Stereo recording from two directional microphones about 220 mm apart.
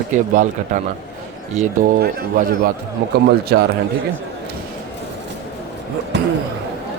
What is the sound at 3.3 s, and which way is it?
Speech, 45° right (ahead or behind).